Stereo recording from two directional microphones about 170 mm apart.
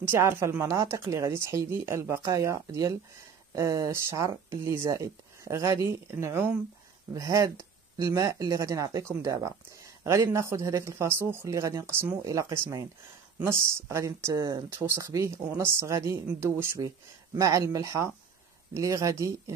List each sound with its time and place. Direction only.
0.0 s a woman's voice: 15° right (ahead or behind)